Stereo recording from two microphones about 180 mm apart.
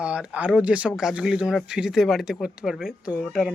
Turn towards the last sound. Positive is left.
turn(degrees=0)  # may be behind; listen again after turning